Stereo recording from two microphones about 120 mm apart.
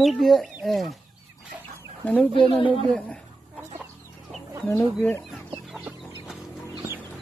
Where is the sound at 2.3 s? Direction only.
45° left (ahead or behind).